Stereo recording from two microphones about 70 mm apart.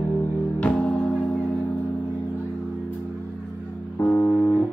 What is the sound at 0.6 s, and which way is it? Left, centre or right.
Music, centre.